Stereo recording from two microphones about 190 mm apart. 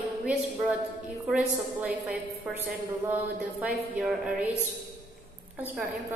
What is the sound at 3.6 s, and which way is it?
Speech, 5° right (ahead or behind).